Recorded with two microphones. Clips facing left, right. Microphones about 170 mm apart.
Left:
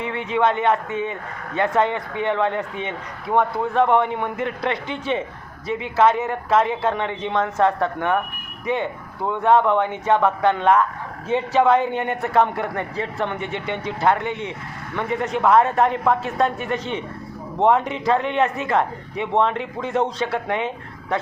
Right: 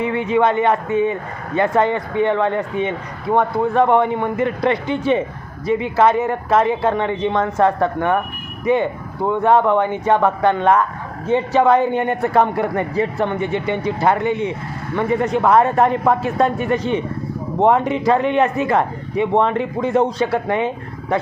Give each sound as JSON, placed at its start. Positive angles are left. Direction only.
{"t": 0.0, "sound": "speech", "side_deg": -5}